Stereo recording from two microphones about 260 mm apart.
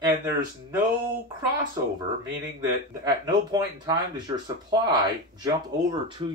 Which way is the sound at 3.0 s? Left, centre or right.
Centre.